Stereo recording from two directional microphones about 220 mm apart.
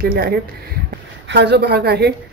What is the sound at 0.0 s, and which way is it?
A woman's voice, 45° right (ahead or behind).